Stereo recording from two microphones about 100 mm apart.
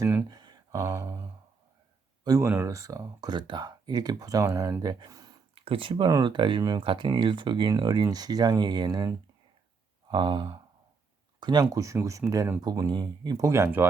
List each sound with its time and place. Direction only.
0.0 s speech: 20° right (ahead or behind)
0.3 s a sound: 45° right (ahead or behind)
0.7 s speech: 35° right (ahead or behind)
5.5 s speech: 65° right (ahead or behind)
6.2 s speech: 50° right (ahead or behind)
10.1 s speech: 50° right (ahead or behind)
13.4 s speech: 25° right (ahead or behind)